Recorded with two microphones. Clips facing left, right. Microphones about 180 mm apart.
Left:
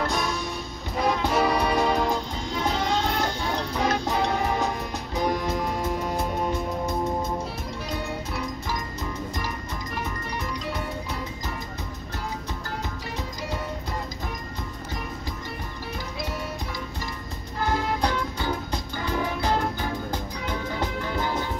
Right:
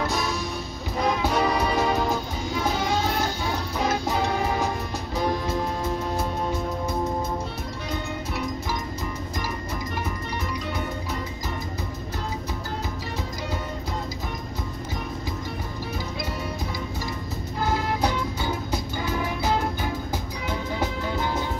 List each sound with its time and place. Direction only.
0.0 s music: 5° right (ahead or behind)
5.1 s music: 15° left (ahead or behind)
18.0 s music: 5° right (ahead or behind)